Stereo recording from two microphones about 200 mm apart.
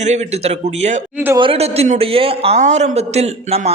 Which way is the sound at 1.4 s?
30° right (ahead or behind).